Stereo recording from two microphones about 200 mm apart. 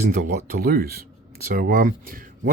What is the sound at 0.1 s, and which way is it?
Speech, 50° right (ahead or behind).